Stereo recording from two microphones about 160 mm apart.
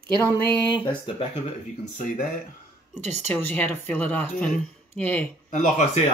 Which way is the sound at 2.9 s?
45° right (ahead or behind).